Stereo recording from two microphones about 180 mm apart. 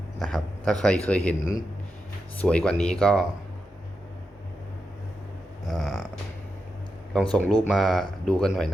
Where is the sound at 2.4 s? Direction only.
5° left (ahead or behind).